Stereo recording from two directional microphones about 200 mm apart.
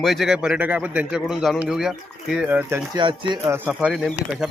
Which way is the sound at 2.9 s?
25° right (ahead or behind).